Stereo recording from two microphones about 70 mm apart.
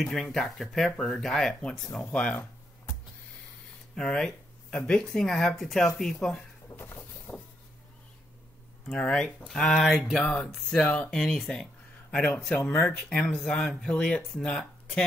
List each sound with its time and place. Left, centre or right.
0.0 s speech: centre
3.9 s speech: centre
6.8 s vehicle: left
8.8 s speech: centre
10.8 s speech: centre